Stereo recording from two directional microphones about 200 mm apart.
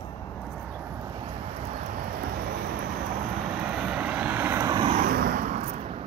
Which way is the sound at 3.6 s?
5° right (ahead or behind).